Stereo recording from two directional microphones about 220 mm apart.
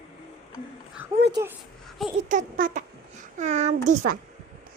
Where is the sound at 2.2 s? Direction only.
40° right (ahead or behind).